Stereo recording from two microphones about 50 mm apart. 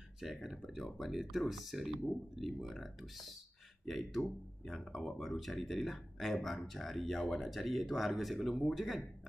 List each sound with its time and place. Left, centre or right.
0.2 s speech: centre